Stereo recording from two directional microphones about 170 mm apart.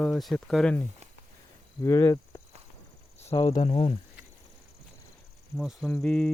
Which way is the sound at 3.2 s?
35° left (ahead or behind).